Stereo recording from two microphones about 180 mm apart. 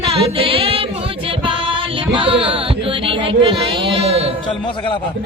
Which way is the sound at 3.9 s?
35° right (ahead or behind).